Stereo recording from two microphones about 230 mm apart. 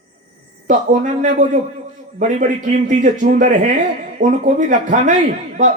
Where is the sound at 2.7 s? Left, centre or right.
Right.